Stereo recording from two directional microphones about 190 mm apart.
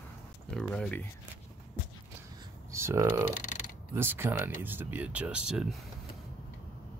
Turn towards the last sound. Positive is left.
turn(degrees=-5)  # may be behind; listen again after turning